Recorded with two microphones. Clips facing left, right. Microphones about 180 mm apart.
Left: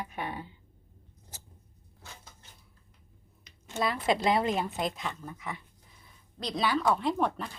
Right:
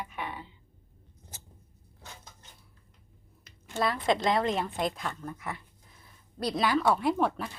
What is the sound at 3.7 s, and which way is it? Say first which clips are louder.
A woman's voice: right 1 dB; centre (ahead or behind).